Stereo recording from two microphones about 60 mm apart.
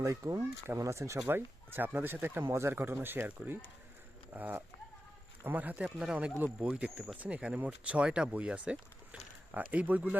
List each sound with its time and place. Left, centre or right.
0.0 s speech: right
0.8 s speech: right
1.3 s speech: right
2.5 s speech: right
5.8 s speech: centre
6.4 s speech: right